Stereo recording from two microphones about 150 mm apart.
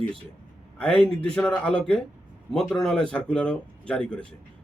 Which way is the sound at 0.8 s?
5° left (ahead or behind).